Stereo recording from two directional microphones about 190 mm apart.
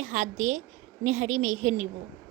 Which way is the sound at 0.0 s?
40° right (ahead or behind).